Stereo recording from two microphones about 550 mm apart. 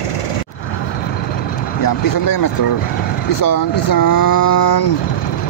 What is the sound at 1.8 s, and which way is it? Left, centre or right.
Speech, left.